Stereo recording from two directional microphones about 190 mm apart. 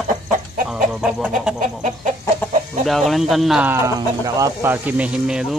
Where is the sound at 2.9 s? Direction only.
Centre (ahead or behind).